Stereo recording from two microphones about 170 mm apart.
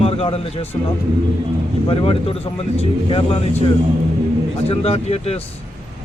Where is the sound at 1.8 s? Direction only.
35° left (ahead or behind).